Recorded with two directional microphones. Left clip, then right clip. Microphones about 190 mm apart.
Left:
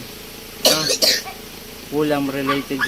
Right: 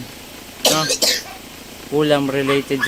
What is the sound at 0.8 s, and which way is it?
Speech, 20° right (ahead or behind).